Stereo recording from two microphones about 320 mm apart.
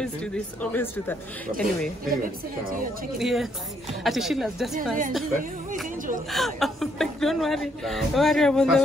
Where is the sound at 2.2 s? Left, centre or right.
Right.